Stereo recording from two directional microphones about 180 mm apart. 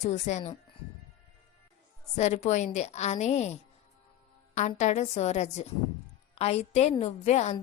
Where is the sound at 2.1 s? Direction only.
40° left (ahead or behind).